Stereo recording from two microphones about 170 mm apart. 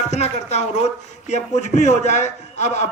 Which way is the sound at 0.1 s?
40° left (ahead or behind).